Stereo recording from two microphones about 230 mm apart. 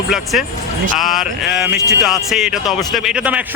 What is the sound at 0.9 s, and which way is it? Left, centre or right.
Speech, centre.